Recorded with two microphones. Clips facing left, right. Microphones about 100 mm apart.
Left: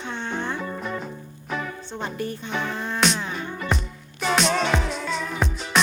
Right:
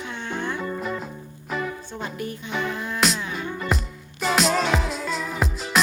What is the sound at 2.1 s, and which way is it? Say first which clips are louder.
Speech: left 2 dB; 30° left (ahead or behind).